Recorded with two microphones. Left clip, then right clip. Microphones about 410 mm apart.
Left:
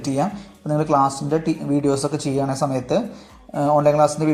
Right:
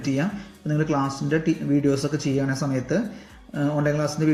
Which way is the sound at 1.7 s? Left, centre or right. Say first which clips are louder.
Left 3 dB; left.